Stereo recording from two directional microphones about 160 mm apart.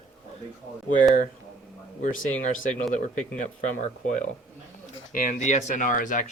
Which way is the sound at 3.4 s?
50° left (ahead or behind).